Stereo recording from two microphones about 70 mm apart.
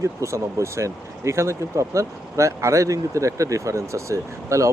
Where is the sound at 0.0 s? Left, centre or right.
Right.